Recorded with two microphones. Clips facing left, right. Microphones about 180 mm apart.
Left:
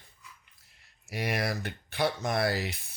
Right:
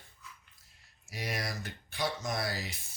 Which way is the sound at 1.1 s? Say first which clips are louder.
Left 7 dB; 60° left (ahead or behind).